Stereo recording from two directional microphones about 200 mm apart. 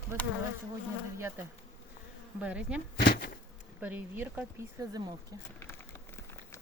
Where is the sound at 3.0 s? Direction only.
45° left (ahead or behind).